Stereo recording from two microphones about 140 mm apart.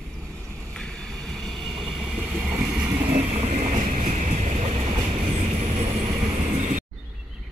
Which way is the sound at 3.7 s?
65° right (ahead or behind).